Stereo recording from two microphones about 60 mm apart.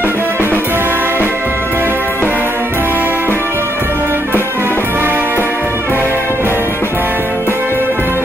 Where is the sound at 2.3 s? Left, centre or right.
Right.